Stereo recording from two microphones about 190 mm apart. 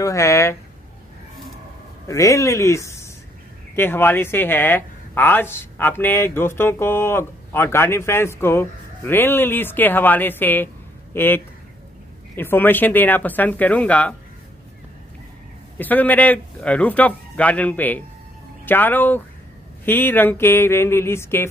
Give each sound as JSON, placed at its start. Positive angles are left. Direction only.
{"t": 0.0, "sound": "speech", "side_deg": 15}
{"t": 2.0, "sound": "speech", "side_deg": 15}
{"t": 15.8, "sound": "speech", "side_deg": 10}